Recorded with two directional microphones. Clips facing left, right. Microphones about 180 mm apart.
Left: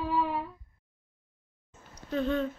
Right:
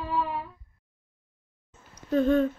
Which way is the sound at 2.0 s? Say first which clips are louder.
Right 7 dB; 45° right (ahead or behind).